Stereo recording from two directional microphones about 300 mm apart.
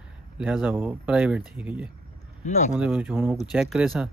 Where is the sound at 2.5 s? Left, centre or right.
Left.